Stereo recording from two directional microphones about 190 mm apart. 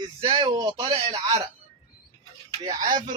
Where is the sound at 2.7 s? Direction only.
25° right (ahead or behind).